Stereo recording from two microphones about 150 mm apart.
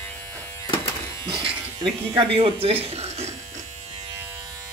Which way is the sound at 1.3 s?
35° right (ahead or behind).